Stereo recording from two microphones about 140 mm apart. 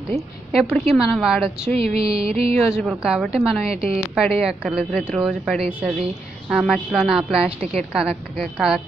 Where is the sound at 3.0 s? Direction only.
5° right (ahead or behind).